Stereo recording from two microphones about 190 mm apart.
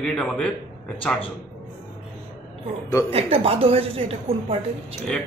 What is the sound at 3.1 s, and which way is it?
A woman's voice, 30° right (ahead or behind).